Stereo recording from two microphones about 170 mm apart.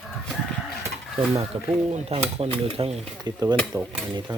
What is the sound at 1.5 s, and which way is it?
Stir, 30° right (ahead or behind).